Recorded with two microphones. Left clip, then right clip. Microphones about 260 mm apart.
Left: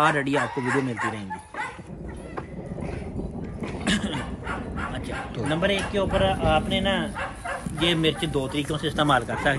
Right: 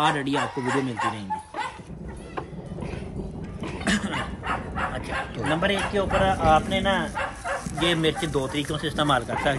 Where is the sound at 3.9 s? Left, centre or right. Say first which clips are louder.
Right 1 dB; centre.